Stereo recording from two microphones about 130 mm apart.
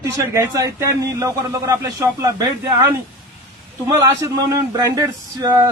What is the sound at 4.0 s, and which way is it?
Speech, 25° right (ahead or behind).